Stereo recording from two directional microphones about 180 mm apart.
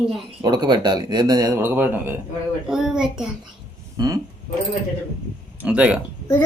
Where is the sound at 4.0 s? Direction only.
20° right (ahead or behind).